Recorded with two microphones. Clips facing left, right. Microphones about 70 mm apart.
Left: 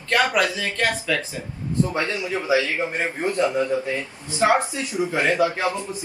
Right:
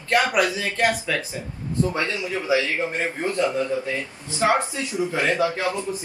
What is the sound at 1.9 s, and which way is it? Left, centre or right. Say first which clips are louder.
A man's voice: left 1 dB; left.